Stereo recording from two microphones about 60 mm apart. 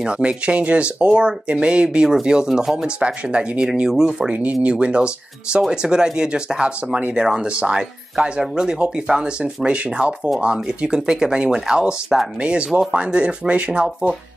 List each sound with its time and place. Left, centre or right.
0.0 s speech: centre
4.4 s speech: right